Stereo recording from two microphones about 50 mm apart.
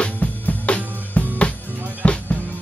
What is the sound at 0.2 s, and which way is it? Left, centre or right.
Music, left.